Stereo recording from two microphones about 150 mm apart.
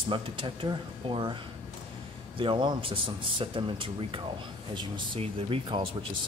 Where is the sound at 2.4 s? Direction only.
35° right (ahead or behind).